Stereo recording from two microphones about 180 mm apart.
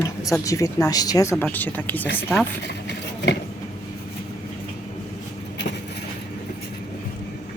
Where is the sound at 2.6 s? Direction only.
70° left (ahead or behind).